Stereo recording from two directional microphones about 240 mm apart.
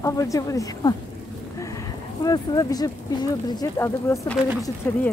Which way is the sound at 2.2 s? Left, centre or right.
Centre.